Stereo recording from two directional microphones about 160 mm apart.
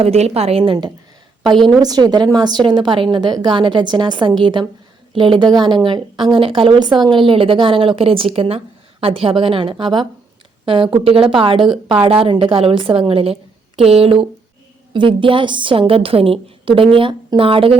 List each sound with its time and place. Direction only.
0.0 s a woman's voice: 40° right (ahead or behind)
1.5 s a woman's voice: centre (ahead or behind)
1.8 s a woman's voice: 25° right (ahead or behind)